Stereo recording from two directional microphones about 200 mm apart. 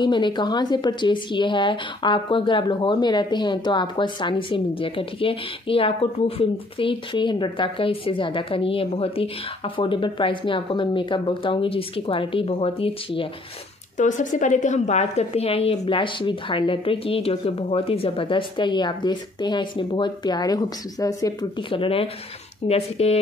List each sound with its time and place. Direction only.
0.0 s a woman's voice: 25° left (ahead or behind)
13.9 s a woman's voice: 40° left (ahead or behind)